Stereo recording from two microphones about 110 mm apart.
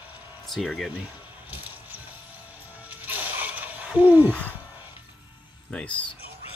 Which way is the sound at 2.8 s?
15° right (ahead or behind).